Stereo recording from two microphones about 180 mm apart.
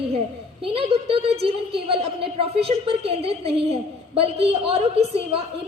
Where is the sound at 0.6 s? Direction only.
30° right (ahead or behind).